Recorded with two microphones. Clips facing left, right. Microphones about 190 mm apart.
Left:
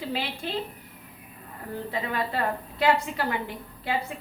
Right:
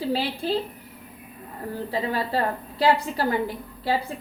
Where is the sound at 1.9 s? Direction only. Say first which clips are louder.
Right 3 dB; 35° right (ahead or behind).